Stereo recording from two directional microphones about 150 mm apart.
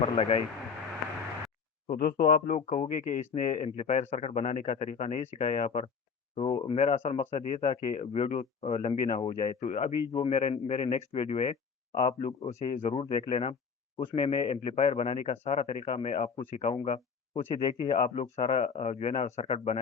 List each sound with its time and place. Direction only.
0.0 s speech: 40° left (ahead or behind)
2.0 s speech: 75° left (ahead or behind)
2.6 s speech: 45° left (ahead or behind)
10.1 s speech: 35° left (ahead or behind)